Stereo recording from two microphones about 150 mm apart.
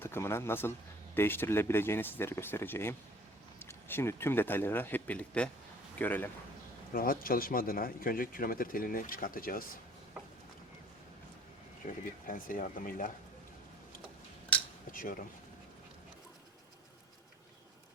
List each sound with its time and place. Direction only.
0.0 s speech: 15° left (ahead or behind)
6.9 s speech: 75° left (ahead or behind)
11.9 s speech: 65° left (ahead or behind)
14.5 s cutlery: 10° left (ahead or behind)